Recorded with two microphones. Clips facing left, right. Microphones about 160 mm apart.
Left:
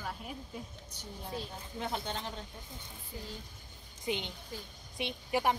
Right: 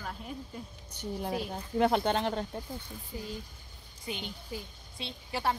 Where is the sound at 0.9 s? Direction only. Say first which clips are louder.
Right 8 dB; 75° right (ahead or behind).